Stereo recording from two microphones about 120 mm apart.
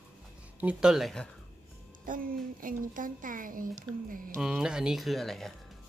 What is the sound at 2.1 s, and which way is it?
Speech, 90° right.